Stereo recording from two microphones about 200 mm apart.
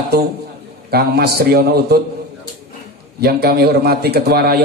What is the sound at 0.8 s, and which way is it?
A man's voice, 50° right (ahead or behind).